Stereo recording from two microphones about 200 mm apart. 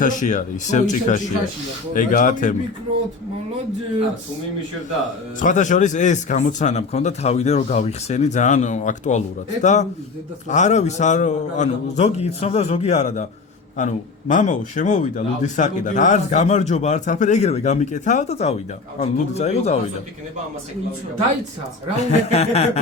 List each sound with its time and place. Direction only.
0.0 s speech: 40° left (ahead or behind)
5.4 s speech: 40° left (ahead or behind)
22.3 s speech: 30° left (ahead or behind)